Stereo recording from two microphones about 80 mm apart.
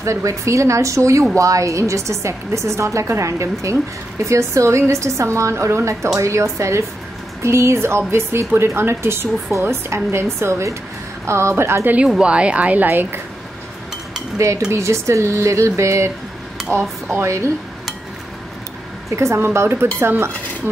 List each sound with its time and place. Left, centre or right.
0.0 s a woman's voice: right
12.2 s speech: centre
14.4 s a woman's voice: right
17.1 s a woman's voice: right
19.0 s a woman's voice: right
20.0 s dishes: right